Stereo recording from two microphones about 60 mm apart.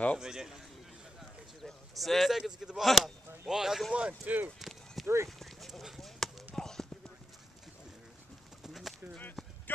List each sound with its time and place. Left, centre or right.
0.2 s a man's voice: centre
1.6 s speech: centre
3.9 s speech: centre
4.6 s a sound: centre
5.0 s speech: right
5.4 s clip-clop: centre
8.6 s bird: centre